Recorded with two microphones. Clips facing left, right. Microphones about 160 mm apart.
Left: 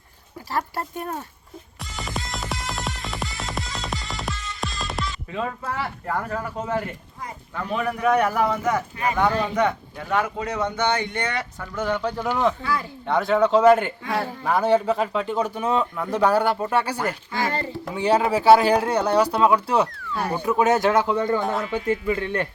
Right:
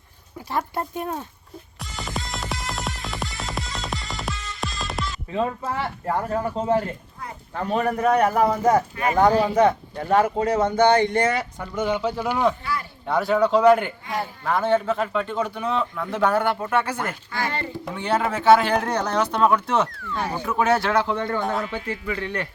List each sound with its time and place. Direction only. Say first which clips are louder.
0.7 s speech: right 2 dB; 20° right (ahead or behind)
1.8 s music: even; centre (ahead or behind)
5.3 s a man's voice: right 4 dB; 25° right (ahead or behind)
11.3 s speech: right 4 dB; 25° right (ahead or behind)
11.8 s a man's voice: right 1 dB; 10° right (ahead or behind); by 16.0 s 15° left (ahead or behind)
16.3 s speech: left 1 dB; 30° left (ahead or behind)
17.8 s speech: left 4 dB; 10° left (ahead or behind)
21.4 s a man's voice: left 1 dB; centre (ahead or behind)